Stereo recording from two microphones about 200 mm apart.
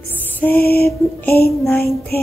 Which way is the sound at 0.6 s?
50° left (ahead or behind).